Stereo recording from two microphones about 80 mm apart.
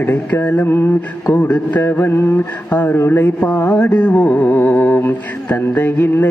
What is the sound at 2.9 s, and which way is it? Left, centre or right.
Speech, left.